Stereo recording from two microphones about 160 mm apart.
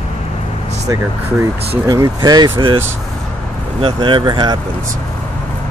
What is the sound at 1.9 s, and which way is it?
Speech, 25° right (ahead or behind).